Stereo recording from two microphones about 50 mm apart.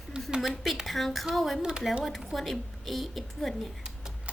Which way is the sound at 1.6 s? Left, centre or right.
Centre.